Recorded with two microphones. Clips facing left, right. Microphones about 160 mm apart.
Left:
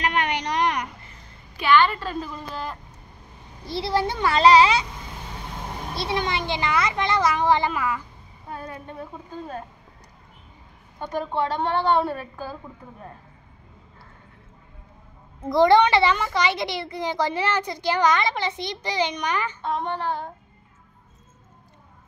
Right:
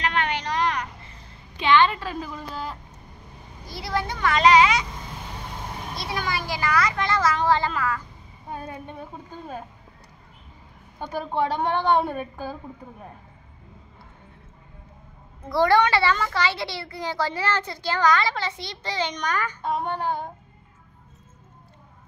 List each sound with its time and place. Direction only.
0.0 s a sound: 15° left (ahead or behind)
1.6 s a woman's voice: 20° right (ahead or behind); by 2.8 s 5° right (ahead or behind)
3.6 s speech: 30° left (ahead or behind)
5.9 s speech: 25° left (ahead or behind)
11.1 s a woman's voice: 10° right (ahead or behind)
15.4 s a child's voice: 20° left (ahead or behind)
19.6 s a woman's voice: 10° right (ahead or behind)